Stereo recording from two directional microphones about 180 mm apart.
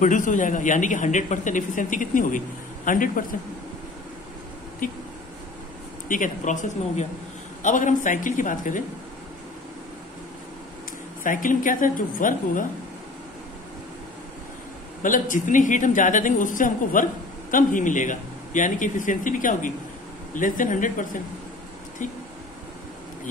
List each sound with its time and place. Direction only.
0.0 s a woman's voice: 45° left (ahead or behind)
4.8 s a woman's voice: 50° left (ahead or behind)
6.0 s a woman's voice: 45° left (ahead or behind)
11.2 s a woman's voice: 50° left (ahead or behind)
15.0 s a woman's voice: 45° left (ahead or behind)